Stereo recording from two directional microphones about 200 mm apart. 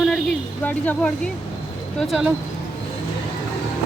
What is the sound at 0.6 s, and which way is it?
Speech, 5° left (ahead or behind).